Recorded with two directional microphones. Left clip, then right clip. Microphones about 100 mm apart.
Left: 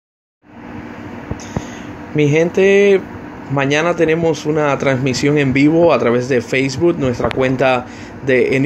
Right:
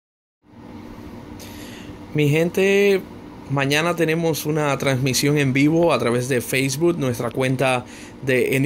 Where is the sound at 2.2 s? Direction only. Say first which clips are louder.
Left 6 dB; 20° right (ahead or behind).